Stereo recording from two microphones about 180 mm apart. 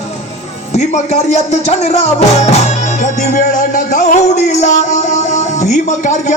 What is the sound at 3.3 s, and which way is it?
Music, 45° left (ahead or behind).